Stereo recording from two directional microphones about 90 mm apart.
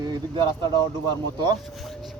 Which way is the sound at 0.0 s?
60° right (ahead or behind).